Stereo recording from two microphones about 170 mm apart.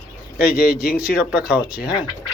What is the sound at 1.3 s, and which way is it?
Speech, 5° right (ahead or behind).